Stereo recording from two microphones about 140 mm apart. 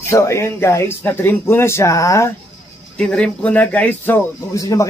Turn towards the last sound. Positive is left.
turn(degrees=25)  # may be behind; listen again after turning